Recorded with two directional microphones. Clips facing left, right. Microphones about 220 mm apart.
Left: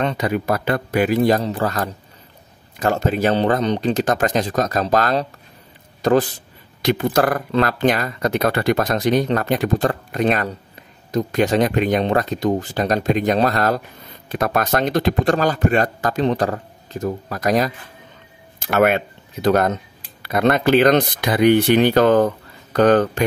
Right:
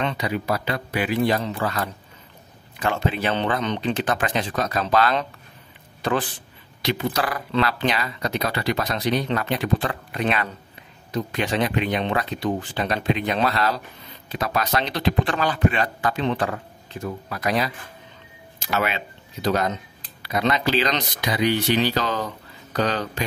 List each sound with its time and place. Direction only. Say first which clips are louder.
0.0 s speech: left 5 dB; 45° left (ahead or behind)